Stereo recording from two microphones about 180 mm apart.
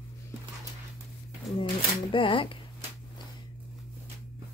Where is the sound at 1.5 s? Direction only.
30° left (ahead or behind).